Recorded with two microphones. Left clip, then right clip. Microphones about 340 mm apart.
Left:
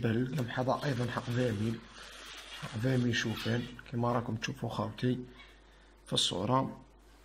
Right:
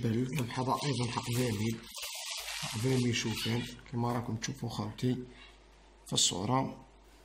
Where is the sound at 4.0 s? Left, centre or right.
Centre.